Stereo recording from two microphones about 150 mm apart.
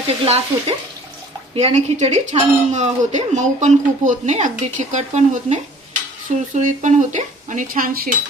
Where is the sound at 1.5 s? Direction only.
40° right (ahead or behind).